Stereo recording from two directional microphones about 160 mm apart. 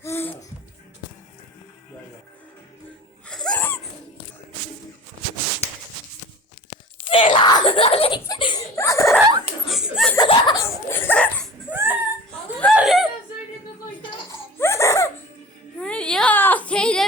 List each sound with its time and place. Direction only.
0.0 s laughter: 15° left (ahead or behind)
3.2 s wheeze: 5° left (ahead or behind)
7.1 s screaming: 30° left (ahead or behind)
8.3 s a sound: 25° left (ahead or behind)
9.6 s chuckle: 5° right (ahead or behind)
10.2 s laughter: 25° left (ahead or behind)
11.7 s a sound: 15° right (ahead or behind)
14.6 s laughter: 15° left (ahead or behind)
15.8 s baby cry: 5° left (ahead or behind)